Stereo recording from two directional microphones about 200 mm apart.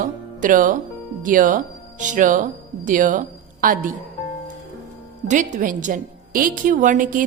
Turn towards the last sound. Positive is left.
turn(degrees=-40)  # may be behind; listen again after turning